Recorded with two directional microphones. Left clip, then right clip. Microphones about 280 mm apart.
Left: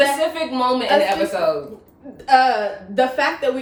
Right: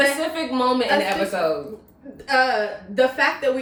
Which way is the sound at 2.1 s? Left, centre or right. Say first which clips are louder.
Left 4 dB; centre.